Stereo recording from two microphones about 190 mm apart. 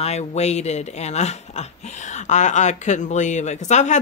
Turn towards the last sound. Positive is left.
turn(degrees=40)  # may be behind; listen again after turning